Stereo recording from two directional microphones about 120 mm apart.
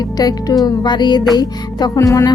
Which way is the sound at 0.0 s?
35° left (ahead or behind).